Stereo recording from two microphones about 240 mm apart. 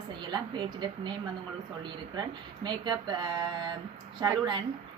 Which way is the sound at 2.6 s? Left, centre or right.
Centre.